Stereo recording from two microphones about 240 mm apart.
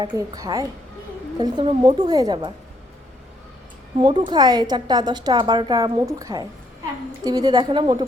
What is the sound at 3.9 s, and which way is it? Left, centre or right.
A woman's voice, right.